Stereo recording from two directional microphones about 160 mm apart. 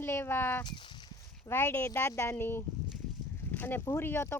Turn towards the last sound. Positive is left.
turn(degrees=15)  # may be behind; listen again after turning